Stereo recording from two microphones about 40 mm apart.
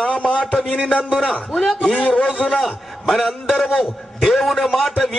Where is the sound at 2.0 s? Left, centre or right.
Left.